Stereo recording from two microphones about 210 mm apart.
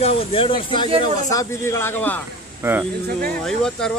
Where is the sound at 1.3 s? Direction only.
10° left (ahead or behind).